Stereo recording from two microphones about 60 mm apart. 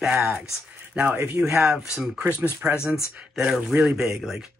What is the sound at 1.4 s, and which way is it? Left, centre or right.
Speech, centre.